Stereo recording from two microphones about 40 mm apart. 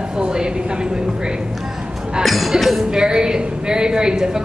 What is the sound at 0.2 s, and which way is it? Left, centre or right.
Speech, right.